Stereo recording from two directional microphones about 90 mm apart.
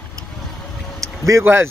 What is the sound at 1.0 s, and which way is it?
Vehicle, 35° right (ahead or behind).